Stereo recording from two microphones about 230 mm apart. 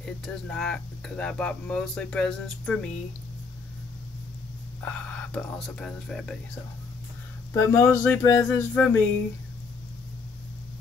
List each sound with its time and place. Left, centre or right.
0.0 s speech: centre
4.8 s speech: centre
7.5 s speech: centre